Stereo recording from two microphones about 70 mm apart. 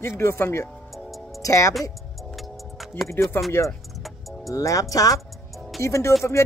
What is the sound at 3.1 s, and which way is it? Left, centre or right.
Speech, left.